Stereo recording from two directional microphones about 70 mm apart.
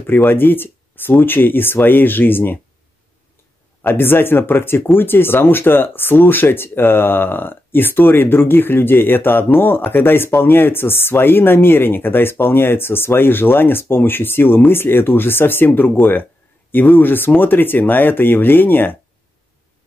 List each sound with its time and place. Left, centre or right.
0.0 s speech: left
3.8 s speech: left